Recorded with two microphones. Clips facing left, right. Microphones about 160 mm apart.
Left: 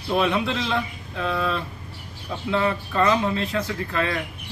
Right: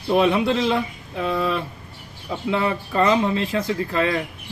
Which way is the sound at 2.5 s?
35° right (ahead or behind).